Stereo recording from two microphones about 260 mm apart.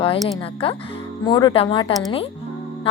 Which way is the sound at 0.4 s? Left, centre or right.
Left.